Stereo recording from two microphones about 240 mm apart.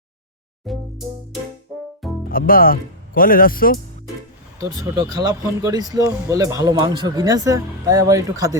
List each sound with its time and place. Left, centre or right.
0.6 s music: centre
2.3 s speech: left
4.6 s speech: centre